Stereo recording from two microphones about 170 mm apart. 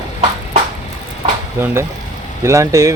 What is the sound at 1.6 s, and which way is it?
Speech, 15° right (ahead or behind).